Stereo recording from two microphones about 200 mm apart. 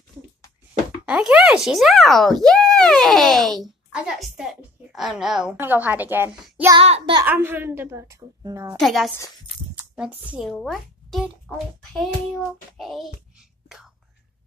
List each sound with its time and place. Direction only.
1.0 s speech: 5° right (ahead or behind)
6.8 s child singing: 25° right (ahead or behind)
7.2 s a woman's voice: 10° right (ahead or behind)
8.7 s speech: centre (ahead or behind)
13.7 s whispering: 5° right (ahead or behind)